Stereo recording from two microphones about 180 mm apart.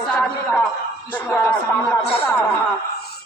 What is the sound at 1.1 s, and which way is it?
Speech, 10° left (ahead or behind).